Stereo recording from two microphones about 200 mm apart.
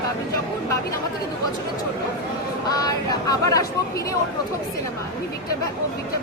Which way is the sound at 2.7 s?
20° left (ahead or behind).